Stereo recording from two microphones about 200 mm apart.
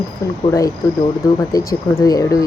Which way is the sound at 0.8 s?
15° left (ahead or behind).